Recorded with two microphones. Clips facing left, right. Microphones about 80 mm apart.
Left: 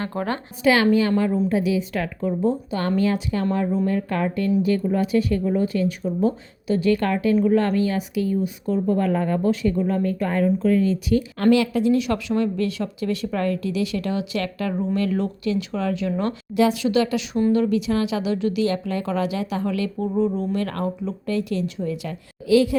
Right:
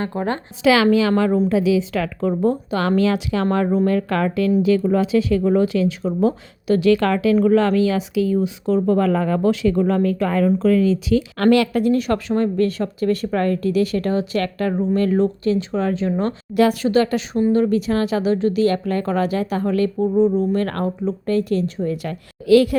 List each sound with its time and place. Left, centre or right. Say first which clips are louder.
0.0 s a woman's voice: right 3 dB; right
0.6 s a woman's voice: right 3 dB; right
2.2 s speech: right 3 dB; right
3.8 s a woman's voice: right 4 dB; right
11.1 s a woman's voice: right 1 dB; right
16.6 s a woman's voice: right 3 dB; right
20.0 s a woman's voice: right 5 dB; right
20.5 s a woman's voice: right 4 dB; right